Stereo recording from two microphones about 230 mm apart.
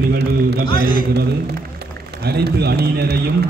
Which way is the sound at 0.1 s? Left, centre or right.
Right.